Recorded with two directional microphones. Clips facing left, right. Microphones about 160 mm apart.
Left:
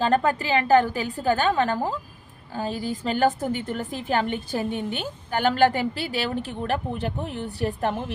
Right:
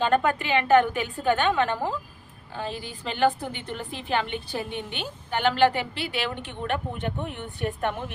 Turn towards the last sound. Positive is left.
turn(degrees=35)  # may be behind; listen again after turning